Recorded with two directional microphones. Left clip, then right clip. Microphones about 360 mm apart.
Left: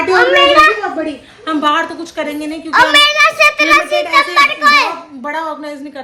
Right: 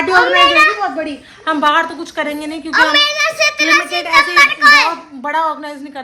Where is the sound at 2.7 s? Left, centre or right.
Centre.